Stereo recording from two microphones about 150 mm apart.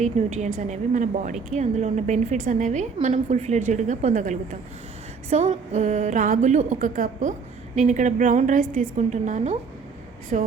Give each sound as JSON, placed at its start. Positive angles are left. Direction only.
{"t": 0.0, "sound": "a woman's voice", "side_deg": -50}